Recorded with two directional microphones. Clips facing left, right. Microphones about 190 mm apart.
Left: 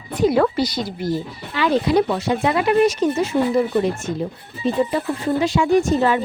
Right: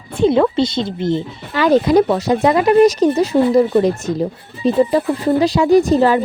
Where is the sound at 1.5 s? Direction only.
45° right (ahead or behind).